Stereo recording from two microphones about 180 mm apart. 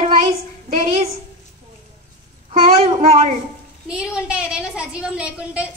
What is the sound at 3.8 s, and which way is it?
Speech, 5° right (ahead or behind).